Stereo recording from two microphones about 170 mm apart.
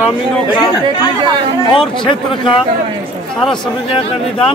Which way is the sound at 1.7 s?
30° left (ahead or behind).